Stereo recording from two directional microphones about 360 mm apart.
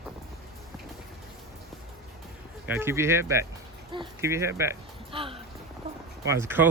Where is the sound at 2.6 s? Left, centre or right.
Centre.